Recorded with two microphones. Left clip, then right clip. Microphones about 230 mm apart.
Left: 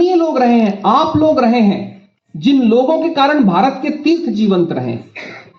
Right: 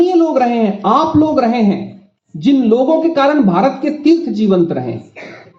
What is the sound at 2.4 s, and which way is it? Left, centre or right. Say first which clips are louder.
Speech: even; right.